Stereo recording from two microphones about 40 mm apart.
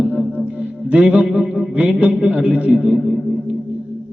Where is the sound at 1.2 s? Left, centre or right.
Right.